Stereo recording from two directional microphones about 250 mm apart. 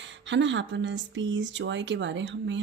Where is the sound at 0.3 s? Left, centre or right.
Right.